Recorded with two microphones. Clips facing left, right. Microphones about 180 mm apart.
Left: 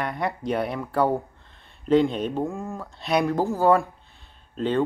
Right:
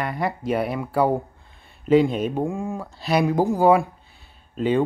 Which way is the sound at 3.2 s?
15° right (ahead or behind).